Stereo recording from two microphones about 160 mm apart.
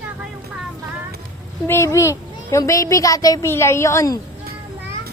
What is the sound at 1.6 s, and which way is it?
A child's voice, 15° left (ahead or behind).